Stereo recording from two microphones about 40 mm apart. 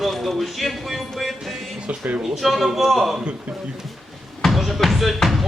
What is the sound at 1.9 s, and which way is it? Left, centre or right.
Speech, right.